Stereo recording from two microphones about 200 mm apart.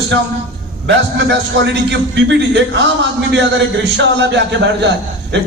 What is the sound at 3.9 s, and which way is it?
A man's voice, 65° right (ahead or behind).